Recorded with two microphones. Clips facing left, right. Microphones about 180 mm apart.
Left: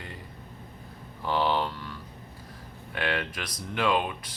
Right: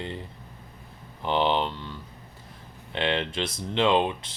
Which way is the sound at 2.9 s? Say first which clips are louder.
Right 4 dB; 25° right (ahead or behind).